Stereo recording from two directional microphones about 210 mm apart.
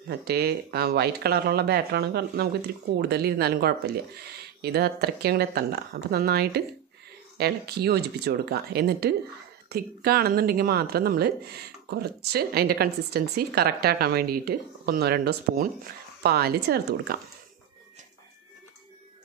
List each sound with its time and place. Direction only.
0.1 s speech: 50° right (ahead or behind)